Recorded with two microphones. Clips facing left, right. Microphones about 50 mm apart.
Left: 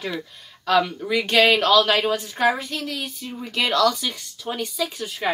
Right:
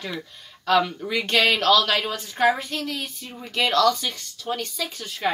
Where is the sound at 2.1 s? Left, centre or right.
Centre.